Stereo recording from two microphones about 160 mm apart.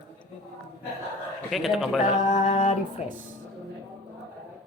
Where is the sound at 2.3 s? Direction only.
55° left (ahead or behind).